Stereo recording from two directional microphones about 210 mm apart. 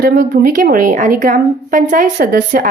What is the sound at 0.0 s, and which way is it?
A woman's voice, 45° right (ahead or behind).